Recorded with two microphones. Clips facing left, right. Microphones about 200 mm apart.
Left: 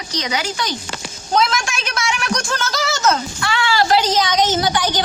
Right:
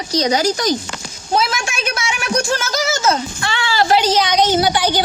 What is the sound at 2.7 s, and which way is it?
Speech, 20° right (ahead or behind).